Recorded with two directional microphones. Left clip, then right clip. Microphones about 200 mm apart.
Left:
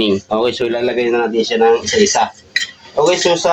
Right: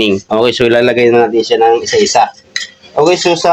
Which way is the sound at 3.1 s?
55° right (ahead or behind).